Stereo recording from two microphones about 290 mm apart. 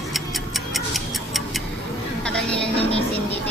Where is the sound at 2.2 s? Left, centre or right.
Centre.